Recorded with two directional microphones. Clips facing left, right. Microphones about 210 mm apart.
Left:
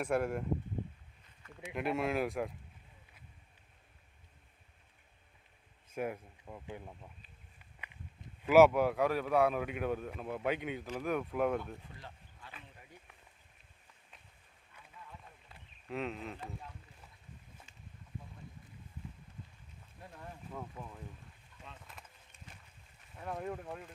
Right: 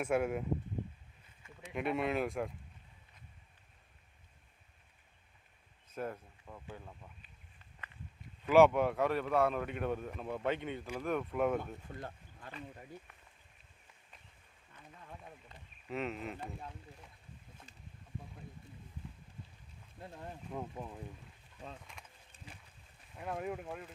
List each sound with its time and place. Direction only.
0.0 s speech: centre (ahead or behind)
1.7 s speech: centre (ahead or behind)
5.9 s speech: 10° left (ahead or behind)
8.4 s speech: 5° left (ahead or behind)
11.9 s a sound: 50° right (ahead or behind)
15.4 s a sound: centre (ahead or behind)
20.0 s speech: 20° right (ahead or behind)
21.9 s a sound: 5° left (ahead or behind)
23.1 s speech: 5° right (ahead or behind)